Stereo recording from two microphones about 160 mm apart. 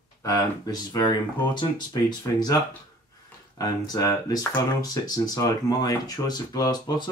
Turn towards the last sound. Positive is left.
turn(degrees=25)  # may be behind; listen again after turning